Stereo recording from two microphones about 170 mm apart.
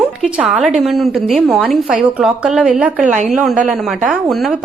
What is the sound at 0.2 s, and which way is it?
A woman's voice, 5° right (ahead or behind).